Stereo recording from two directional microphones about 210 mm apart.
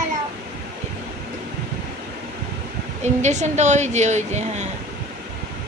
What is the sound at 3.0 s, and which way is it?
A woman's voice, 35° right (ahead or behind).